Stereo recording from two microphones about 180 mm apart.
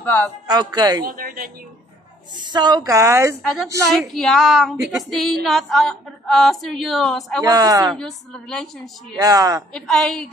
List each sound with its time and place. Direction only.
0.0 s speech: 10° left (ahead or behind)
0.5 s a woman's voice: 20° right (ahead or behind)
1.0 s a woman's voice: 50° right (ahead or behind)
2.3 s a woman's voice: 25° right (ahead or behind)
4.1 s a woman's voice: centre (ahead or behind)
7.4 s a woman's voice: 20° right (ahead or behind)
7.9 s a woman's voice: 5° left (ahead or behind)
9.2 s a woman's voice: 20° right (ahead or behind)
9.7 s a woman's voice: 5° left (ahead or behind)